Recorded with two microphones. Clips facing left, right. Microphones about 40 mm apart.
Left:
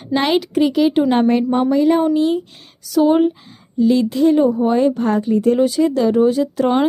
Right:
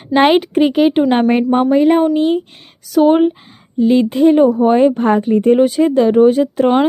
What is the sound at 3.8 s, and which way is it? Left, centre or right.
A woman's voice, right.